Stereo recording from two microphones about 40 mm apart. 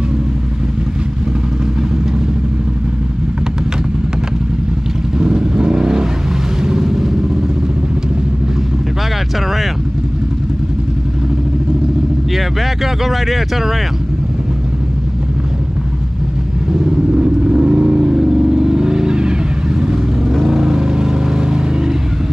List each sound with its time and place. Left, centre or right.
5.2 s vehicle: centre
6.6 s a sound: centre
12.4 s speech: centre
17.1 s vehicle: right